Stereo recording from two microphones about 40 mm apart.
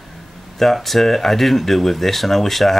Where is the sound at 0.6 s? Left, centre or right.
Centre.